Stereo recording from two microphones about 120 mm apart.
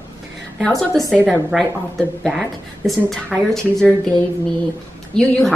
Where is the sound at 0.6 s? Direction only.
Centre (ahead or behind).